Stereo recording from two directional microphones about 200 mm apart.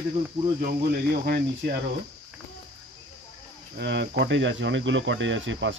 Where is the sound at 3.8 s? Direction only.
60° right (ahead or behind).